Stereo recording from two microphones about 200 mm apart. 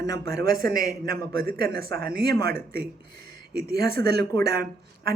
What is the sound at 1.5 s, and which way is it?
Speech, 50° right (ahead or behind).